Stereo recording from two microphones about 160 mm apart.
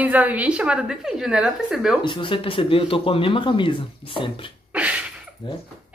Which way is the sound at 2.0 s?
30° left (ahead or behind).